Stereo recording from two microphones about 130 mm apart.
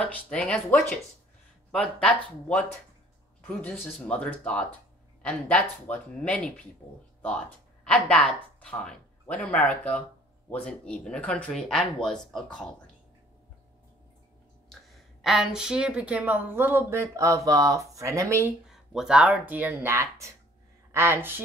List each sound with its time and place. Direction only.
0.0 s speech: 10° left (ahead or behind)
15.2 s speech: centre (ahead or behind); by 18.5 s 25° right (ahead or behind)
18.7 s speech: 5° right (ahead or behind)